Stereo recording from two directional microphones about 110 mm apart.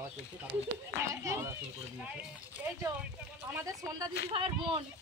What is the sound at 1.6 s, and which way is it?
Speech, 10° right (ahead or behind).